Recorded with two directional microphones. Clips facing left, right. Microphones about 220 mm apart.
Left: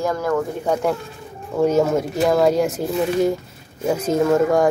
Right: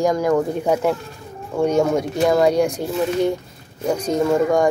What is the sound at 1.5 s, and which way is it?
Speech, 5° left (ahead or behind).